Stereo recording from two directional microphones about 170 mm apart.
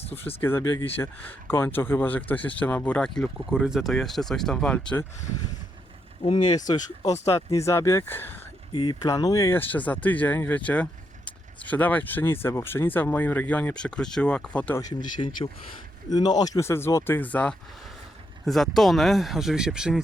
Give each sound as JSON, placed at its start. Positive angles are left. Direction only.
{"t": 0.0, "sound": "speech", "side_deg": 35}
{"t": 0.4, "sound": "speech", "side_deg": 15}
{"t": 6.2, "sound": "speech", "side_deg": 30}
{"t": 8.7, "sound": "speech", "side_deg": 25}
{"t": 14.8, "sound": "speech", "side_deg": 20}